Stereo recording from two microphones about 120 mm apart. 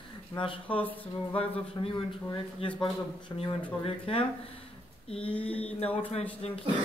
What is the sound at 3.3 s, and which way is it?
Speech, 30° left (ahead or behind).